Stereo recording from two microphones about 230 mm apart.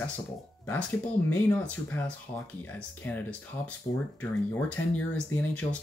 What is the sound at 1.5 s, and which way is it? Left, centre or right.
Speech, centre.